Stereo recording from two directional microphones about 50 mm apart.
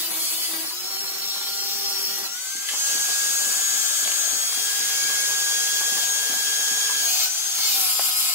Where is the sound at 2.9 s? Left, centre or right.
Right.